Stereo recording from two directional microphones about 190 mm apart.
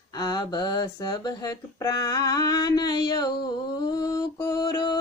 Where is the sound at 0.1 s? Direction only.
20° left (ahead or behind).